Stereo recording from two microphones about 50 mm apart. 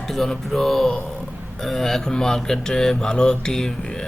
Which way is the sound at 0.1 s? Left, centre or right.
Centre.